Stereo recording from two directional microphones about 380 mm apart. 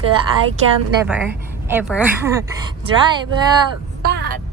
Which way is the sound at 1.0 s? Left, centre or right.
Centre.